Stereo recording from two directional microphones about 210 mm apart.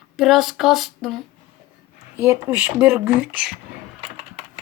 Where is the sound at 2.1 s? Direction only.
15° right (ahead or behind).